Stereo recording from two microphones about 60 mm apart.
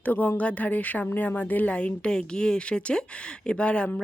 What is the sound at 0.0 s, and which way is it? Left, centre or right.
Speech, left.